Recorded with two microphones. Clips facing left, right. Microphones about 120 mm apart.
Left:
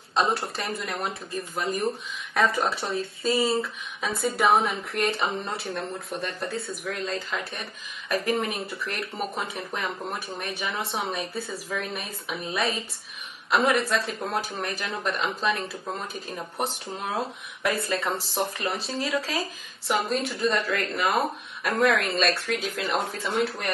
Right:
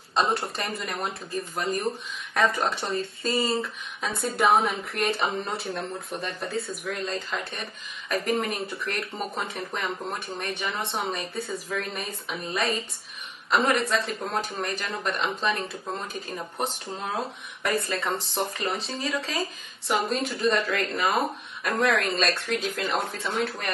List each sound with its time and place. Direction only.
0.1 s speech: centre (ahead or behind)